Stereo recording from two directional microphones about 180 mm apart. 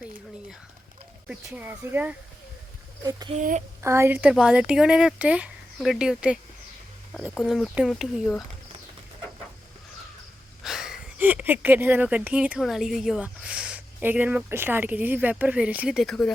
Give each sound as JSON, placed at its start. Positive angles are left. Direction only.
{"t": 1.3, "sound": "speech", "side_deg": -5}
{"t": 3.0, "sound": "speech", "side_deg": -20}
{"t": 10.6, "sound": "speech", "side_deg": 0}